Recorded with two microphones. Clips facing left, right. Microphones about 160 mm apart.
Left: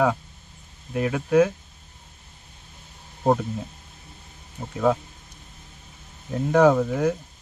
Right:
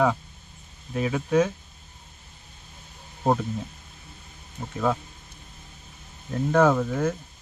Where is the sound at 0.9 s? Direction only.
5° left (ahead or behind).